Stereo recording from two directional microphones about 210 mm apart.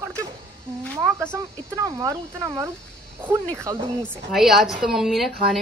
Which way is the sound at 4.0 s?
Centre (ahead or behind).